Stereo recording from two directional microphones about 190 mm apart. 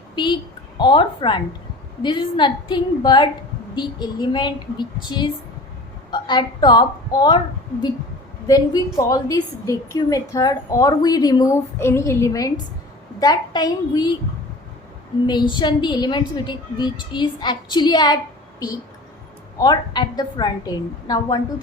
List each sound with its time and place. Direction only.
0.2 s a woman's voice: 25° left (ahead or behind)
8.4 s a woman's voice: 20° left (ahead or behind)
15.3 s a woman's voice: 25° left (ahead or behind)
19.5 s a woman's voice: 20° left (ahead or behind)